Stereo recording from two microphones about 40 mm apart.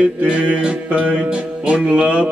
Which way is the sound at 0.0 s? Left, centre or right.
Right.